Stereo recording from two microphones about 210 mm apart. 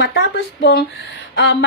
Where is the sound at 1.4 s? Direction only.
55° left (ahead or behind).